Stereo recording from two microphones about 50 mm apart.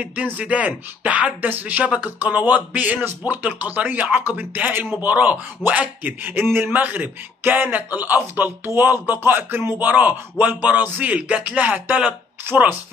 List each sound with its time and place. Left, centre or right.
0.0 s a man's voice: right
12.5 s speech: right